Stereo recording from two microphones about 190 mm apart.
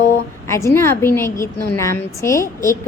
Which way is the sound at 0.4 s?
15° left (ahead or behind).